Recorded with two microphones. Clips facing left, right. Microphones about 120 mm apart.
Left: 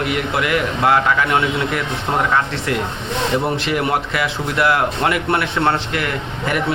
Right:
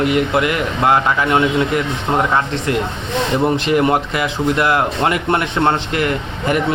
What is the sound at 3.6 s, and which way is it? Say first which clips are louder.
Speech: right 4 dB; 30° right (ahead or behind).